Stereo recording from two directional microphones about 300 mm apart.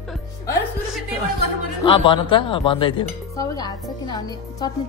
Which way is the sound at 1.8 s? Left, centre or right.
Centre.